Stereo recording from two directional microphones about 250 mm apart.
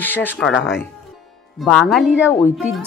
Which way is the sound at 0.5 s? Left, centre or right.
Left.